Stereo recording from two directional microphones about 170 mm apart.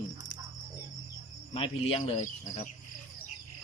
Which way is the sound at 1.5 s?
35° left (ahead or behind).